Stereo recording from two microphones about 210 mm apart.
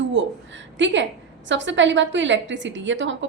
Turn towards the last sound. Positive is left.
turn(degrees=-60)  # may be behind; listen again after turning